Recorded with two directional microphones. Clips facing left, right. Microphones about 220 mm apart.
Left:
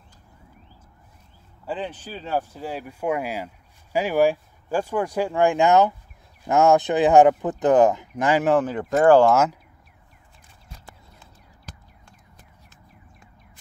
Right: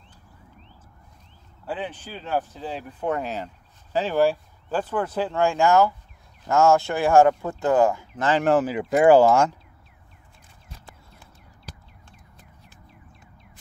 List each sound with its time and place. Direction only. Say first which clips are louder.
1.7 s speech: left 1 dB; 10° right (ahead or behind)
2.0 s speech: even; 10° left (ahead or behind)
8.5 s speech: even; 5° right (ahead or behind)
9.2 s speech: even; 5° left (ahead or behind)